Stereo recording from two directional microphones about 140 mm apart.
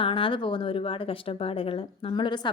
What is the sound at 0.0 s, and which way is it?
A woman's voice, 40° left (ahead or behind).